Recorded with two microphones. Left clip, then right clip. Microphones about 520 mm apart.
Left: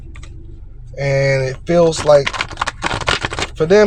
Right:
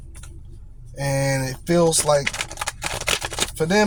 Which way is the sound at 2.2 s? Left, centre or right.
Right.